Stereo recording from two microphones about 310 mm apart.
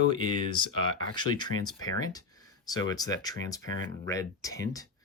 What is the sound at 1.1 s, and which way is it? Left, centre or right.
Speech, centre.